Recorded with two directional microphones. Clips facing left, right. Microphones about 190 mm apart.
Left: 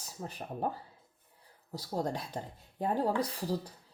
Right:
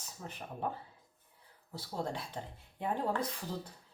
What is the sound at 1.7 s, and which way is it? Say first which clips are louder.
Speech: left 4 dB; 40° left (ahead or behind).